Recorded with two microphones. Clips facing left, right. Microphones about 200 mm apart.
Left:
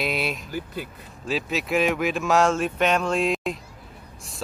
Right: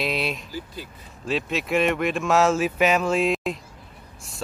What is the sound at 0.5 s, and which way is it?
Speech, 55° left (ahead or behind).